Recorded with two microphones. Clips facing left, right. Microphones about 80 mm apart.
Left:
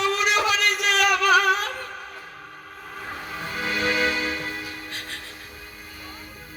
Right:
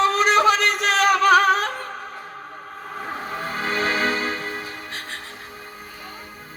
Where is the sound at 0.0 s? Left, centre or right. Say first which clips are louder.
Right 6 dB; right.